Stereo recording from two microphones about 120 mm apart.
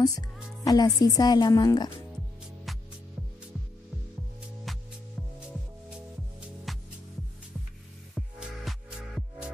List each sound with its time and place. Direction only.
0.7 s a woman's voice: 30° left (ahead or behind)
4.7 s music: centre (ahead or behind)
6.7 s music: centre (ahead or behind)
8.1 s music: centre (ahead or behind)